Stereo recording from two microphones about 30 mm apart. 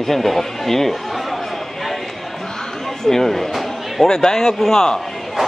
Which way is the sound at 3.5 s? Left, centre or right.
Centre.